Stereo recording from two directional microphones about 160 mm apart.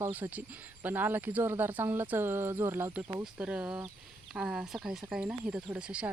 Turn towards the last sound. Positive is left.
turn(degrees=-5)  # may be behind; listen again after turning